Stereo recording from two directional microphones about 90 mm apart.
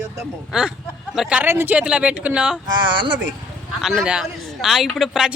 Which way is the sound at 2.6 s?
60° right (ahead or behind).